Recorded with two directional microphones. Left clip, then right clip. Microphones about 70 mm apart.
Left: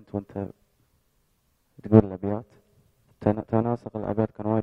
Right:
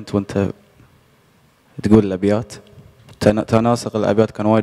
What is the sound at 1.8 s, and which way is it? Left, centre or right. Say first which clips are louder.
Speech: right 6 dB; centre.